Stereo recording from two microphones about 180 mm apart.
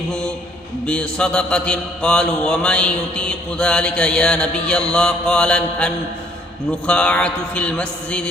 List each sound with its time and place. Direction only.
0.9 s mantra: 5° left (ahead or behind)
6.7 s a man's voice: 5° left (ahead or behind)